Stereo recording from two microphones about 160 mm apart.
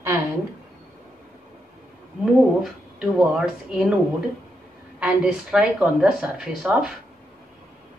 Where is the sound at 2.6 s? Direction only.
5° right (ahead or behind).